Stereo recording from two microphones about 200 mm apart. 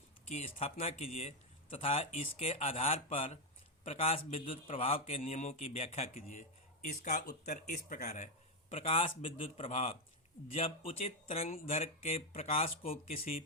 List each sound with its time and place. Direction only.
0.3 s speech: 35° left (ahead or behind)